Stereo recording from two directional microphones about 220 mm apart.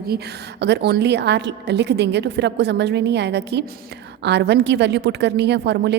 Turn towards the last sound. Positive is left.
turn(degrees=-50)  # may be behind; listen again after turning